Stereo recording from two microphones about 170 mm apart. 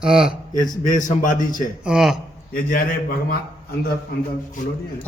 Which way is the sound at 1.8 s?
5° right (ahead or behind).